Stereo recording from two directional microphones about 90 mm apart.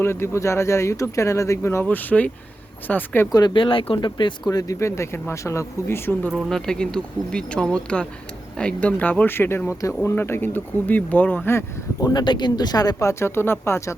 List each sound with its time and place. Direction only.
0.0 s speech: 30° left (ahead or behind)
1.8 s speech: 20° left (ahead or behind)
3.3 s speech: 60° left (ahead or behind)
4.4 s speech: 40° left (ahead or behind)
6.5 s speech: 10° left (ahead or behind)
11.5 s speech: 40° left (ahead or behind)